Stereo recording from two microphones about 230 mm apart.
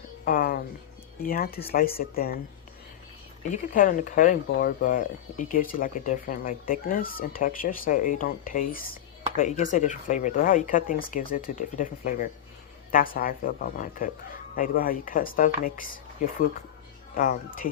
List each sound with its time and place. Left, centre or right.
0.3 s a sound: left
1.2 s speech: left
3.5 s speech: left
17.2 s speech: left